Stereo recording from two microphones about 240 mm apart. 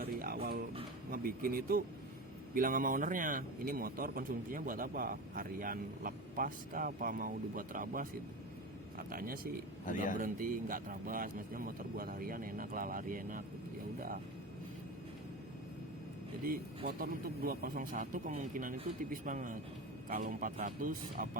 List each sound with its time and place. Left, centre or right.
0.0 s music: right
1.1 s a man's voice: right
9.8 s speech: left
10.2 s a man's voice: right
16.4 s a man's voice: right